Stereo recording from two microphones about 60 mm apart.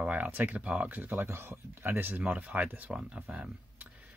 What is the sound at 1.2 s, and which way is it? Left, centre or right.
Speech, right.